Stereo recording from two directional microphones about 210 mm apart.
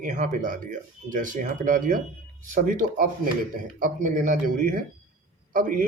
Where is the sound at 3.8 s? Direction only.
40° right (ahead or behind).